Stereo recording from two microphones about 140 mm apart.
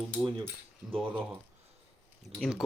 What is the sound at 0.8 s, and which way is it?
Speech, 5° right (ahead or behind).